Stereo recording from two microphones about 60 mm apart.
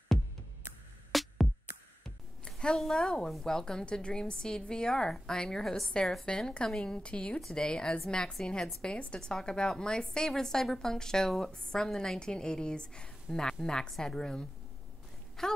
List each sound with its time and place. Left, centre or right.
1.1 s music: centre
2.4 s a woman's voice: centre
15.4 s a sound: centre